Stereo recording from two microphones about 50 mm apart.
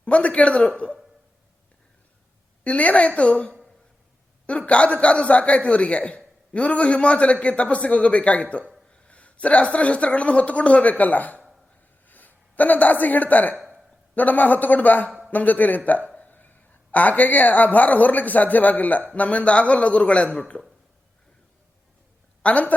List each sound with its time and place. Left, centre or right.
0.0 s speech: left
2.6 s speech: left
8.9 s a sound: left
9.7 s a man's voice: left
15.9 s a sound: left
16.3 s a woman's voice: left
22.4 s speech: left